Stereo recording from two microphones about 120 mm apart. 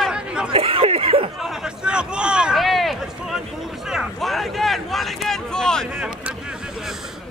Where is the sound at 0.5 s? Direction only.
50° right (ahead or behind).